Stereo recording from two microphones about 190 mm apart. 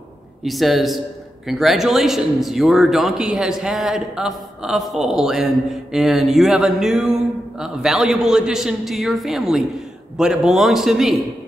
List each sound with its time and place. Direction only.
0.4 s a man's voice: centre (ahead or behind)